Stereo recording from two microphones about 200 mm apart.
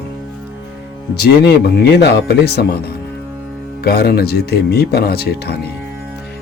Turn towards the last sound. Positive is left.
turn(degrees=55)  # may be behind; listen again after turning